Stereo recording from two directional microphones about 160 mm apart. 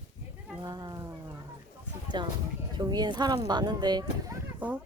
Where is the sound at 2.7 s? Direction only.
25° right (ahead or behind).